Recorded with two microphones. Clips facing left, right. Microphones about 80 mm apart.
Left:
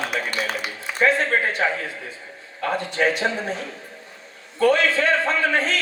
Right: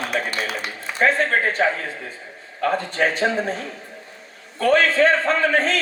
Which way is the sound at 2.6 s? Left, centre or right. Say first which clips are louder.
Right 1 dB; right.